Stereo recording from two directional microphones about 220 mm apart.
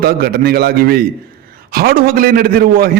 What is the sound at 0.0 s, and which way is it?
A man's voice, 45° right (ahead or behind).